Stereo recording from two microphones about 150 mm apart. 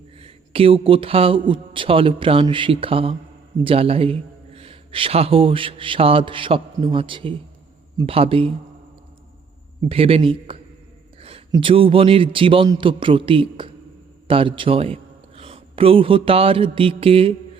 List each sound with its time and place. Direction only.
0.2 s a man's voice: 40° right (ahead or behind)
9.9 s a man's voice: 40° right (ahead or behind)
11.2 s a sound: 40° right (ahead or behind)
11.5 s a man's voice: 35° right (ahead or behind)
15.4 s mantra: 40° right (ahead or behind)